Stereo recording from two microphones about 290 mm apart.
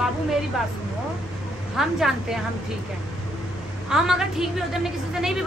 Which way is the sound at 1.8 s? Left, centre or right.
Centre.